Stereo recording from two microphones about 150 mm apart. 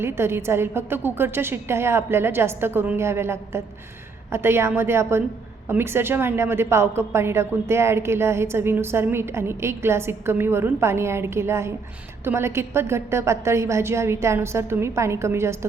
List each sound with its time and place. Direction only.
0.0 s a woman's voice: 15° right (ahead or behind)